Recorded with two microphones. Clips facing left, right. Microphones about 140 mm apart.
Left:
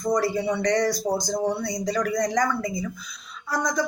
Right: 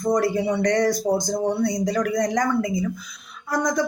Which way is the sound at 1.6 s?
50° right (ahead or behind).